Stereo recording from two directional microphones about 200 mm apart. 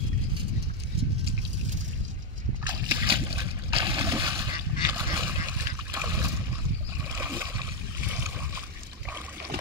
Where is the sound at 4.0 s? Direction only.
15° right (ahead or behind).